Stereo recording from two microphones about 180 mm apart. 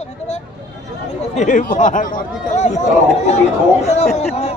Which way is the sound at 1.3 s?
45° left (ahead or behind).